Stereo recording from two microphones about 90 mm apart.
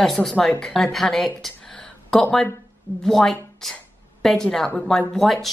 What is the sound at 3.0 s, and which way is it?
A woman's voice, 5° left (ahead or behind).